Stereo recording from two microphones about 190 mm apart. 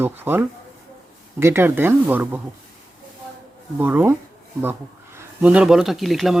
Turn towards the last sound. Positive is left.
turn(degrees=0)  # may be behind; listen again after turning